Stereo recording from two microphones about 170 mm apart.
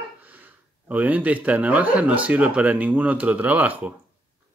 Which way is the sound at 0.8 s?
10° right (ahead or behind).